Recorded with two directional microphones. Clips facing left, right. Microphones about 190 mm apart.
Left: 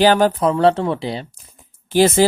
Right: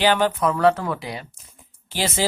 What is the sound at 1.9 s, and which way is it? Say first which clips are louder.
Speech: left 11 dB; 50° left (ahead or behind).